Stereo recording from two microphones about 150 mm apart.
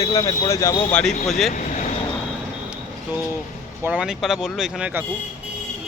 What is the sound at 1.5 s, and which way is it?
Speech, 60° left (ahead or behind).